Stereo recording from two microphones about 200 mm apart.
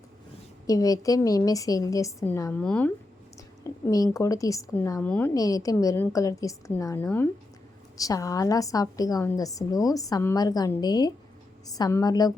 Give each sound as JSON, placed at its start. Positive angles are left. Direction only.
{"t": 0.7, "sound": "a woman's voice", "side_deg": 15}